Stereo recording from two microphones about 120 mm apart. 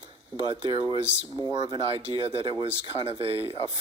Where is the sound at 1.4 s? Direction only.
35° right (ahead or behind).